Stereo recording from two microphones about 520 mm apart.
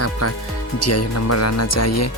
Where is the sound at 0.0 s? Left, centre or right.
Left.